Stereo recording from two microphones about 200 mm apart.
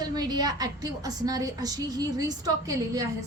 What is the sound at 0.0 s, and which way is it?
A woman's voice, 20° right (ahead or behind).